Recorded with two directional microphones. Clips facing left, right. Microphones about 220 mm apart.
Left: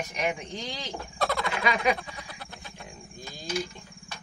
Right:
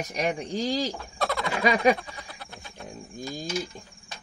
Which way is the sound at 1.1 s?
Centre (ahead or behind).